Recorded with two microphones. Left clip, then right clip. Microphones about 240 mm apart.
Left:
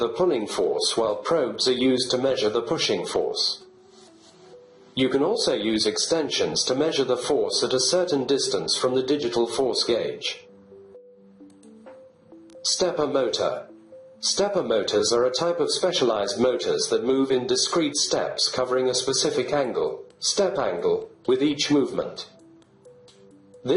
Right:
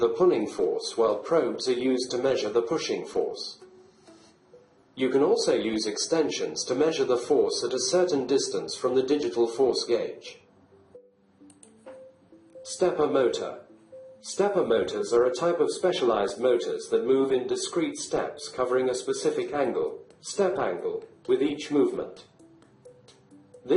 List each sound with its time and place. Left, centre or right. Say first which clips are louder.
0.0 s speech: even; left
4.9 s speech: left 1 dB; left
12.7 s speech: even; left